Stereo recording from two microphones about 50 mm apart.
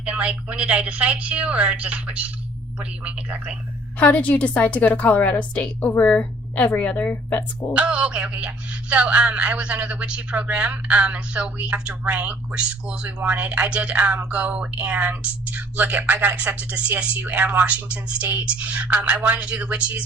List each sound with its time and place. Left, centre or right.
0.0 s speech: right
3.9 s a woman's voice: left
7.7 s a woman's voice: right